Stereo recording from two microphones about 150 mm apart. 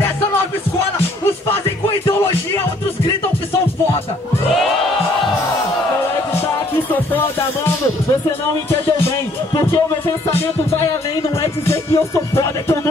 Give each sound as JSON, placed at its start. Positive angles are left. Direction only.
{"t": 2.0, "sound": "music", "side_deg": 15}
{"t": 9.6, "sound": "music", "side_deg": 20}
{"t": 11.6, "sound": "music", "side_deg": 20}